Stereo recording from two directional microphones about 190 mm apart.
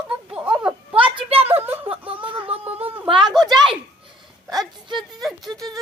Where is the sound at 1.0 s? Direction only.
25° right (ahead or behind).